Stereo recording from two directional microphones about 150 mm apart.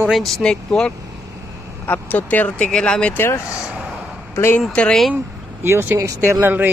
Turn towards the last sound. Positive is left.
turn(degrees=-15)  # may be behind; listen again after turning